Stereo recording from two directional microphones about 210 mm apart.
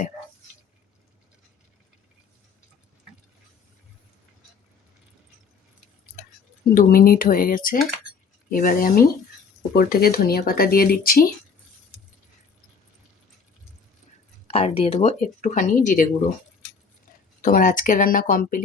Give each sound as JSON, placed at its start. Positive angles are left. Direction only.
{"t": 6.2, "sound": "a sound", "side_deg": 45}
{"t": 6.7, "sound": "speech", "side_deg": 45}
{"t": 14.5, "sound": "speech", "side_deg": 30}
{"t": 17.4, "sound": "speech", "side_deg": 40}